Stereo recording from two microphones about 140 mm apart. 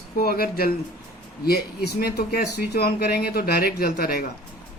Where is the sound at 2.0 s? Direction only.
90° left.